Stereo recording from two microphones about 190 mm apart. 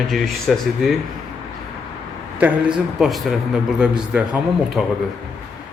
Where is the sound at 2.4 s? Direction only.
5° right (ahead or behind).